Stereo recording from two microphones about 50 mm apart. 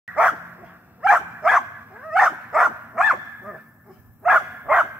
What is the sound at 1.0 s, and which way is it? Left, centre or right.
Dog, centre.